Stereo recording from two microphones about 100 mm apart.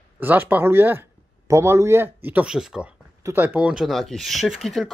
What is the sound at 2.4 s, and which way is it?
Speech, 5° right (ahead or behind).